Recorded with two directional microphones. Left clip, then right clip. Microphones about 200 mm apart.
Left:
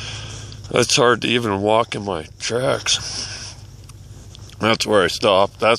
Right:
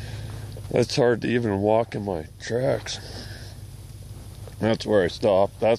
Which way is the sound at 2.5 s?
60° left (ahead or behind).